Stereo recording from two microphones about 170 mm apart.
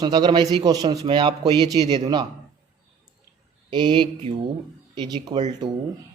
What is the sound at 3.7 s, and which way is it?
Speech, 25° right (ahead or behind).